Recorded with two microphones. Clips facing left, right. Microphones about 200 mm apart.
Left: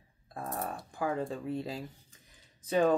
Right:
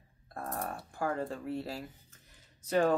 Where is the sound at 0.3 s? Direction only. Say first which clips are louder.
Left 1 dB; centre (ahead or behind).